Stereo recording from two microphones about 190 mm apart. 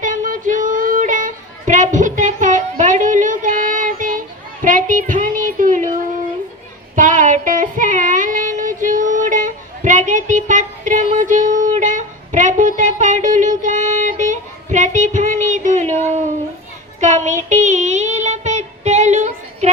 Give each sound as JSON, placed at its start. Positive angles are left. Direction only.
{"t": 0.0, "sound": "child singing", "side_deg": -45}
{"t": 4.6, "sound": "a sound", "side_deg": -45}
{"t": 6.9, "sound": "child singing", "side_deg": -40}